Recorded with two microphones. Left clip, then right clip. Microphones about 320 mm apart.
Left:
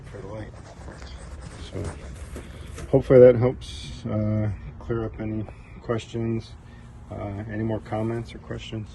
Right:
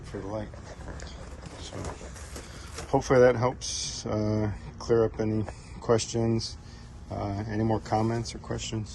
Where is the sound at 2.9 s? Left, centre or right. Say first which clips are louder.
Left 7 dB; left.